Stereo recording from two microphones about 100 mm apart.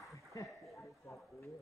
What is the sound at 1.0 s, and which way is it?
Speech, 30° left (ahead or behind).